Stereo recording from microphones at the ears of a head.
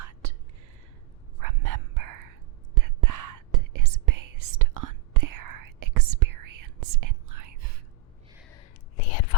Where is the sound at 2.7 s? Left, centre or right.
Right.